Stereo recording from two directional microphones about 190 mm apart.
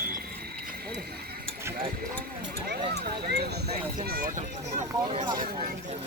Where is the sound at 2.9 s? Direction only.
60° right (ahead or behind); by 5.2 s 40° right (ahead or behind).